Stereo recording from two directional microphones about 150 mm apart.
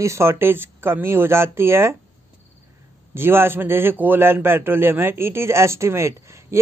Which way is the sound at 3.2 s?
15° right (ahead or behind).